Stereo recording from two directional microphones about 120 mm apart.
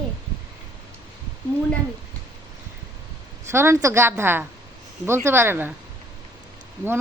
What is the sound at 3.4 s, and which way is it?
A woman's voice, 20° right (ahead or behind).